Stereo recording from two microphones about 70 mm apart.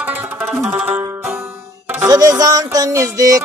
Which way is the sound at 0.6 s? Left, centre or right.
Right.